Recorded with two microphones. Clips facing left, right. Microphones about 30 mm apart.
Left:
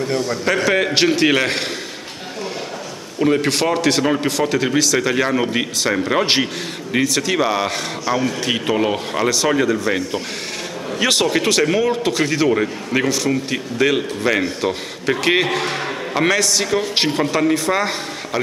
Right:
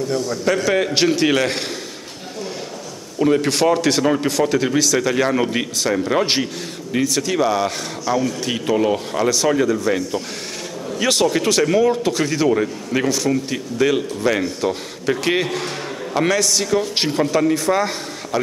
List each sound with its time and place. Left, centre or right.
0.0 s a man's voice: left
0.7 s a man's voice: left
3.2 s speech: centre
5.9 s a man's voice: centre